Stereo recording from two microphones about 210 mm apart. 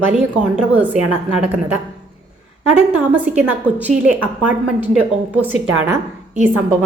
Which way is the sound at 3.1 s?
10° right (ahead or behind).